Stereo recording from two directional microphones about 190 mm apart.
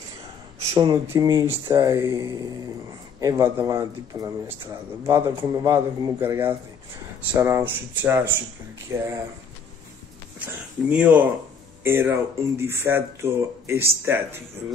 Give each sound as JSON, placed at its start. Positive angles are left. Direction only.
{"t": 0.7, "sound": "speech", "side_deg": -20}
{"t": 10.9, "sound": "speech", "side_deg": -5}